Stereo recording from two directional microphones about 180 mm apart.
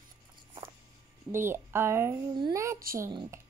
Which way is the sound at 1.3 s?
15° right (ahead or behind).